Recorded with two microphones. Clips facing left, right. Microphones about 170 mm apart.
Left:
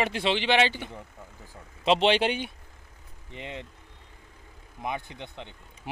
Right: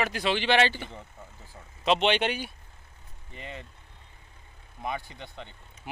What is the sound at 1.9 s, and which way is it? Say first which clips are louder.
A man's voice: left 2 dB; 30° left (ahead or behind).